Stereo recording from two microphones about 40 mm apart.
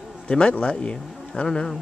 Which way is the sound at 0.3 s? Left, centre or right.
Left.